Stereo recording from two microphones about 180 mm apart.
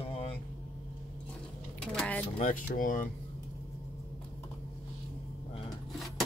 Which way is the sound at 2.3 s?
45° left (ahead or behind).